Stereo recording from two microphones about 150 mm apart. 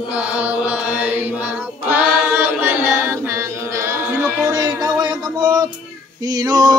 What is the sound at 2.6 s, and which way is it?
Chant, 15° right (ahead or behind).